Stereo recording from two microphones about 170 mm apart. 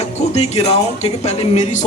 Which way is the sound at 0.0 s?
40° left (ahead or behind).